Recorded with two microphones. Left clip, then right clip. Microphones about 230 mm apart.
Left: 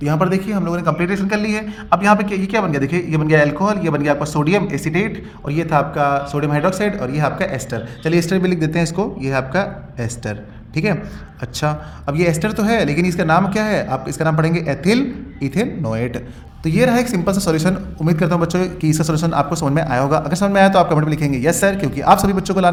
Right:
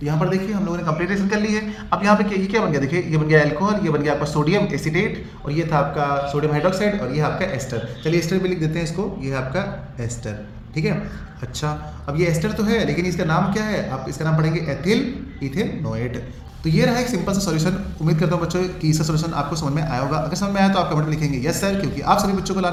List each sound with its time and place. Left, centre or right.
0.0 s a woman's voice: left